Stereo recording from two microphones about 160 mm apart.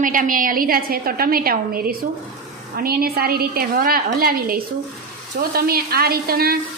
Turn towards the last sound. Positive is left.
turn(degrees=-70)  # may be behind; listen again after turning